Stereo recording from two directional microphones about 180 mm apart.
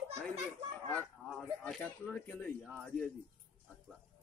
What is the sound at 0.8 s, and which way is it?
Speech, 10° left (ahead or behind).